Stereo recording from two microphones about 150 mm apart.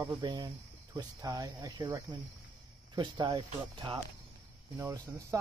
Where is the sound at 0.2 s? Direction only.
30° right (ahead or behind).